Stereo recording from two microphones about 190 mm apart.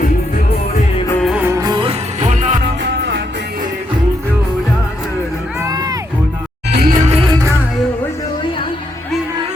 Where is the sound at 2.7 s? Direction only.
65° right (ahead or behind).